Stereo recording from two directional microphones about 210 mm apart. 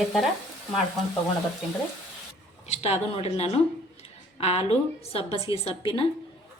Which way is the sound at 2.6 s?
30° left (ahead or behind).